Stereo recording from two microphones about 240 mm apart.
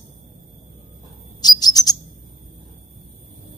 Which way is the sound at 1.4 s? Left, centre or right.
Centre.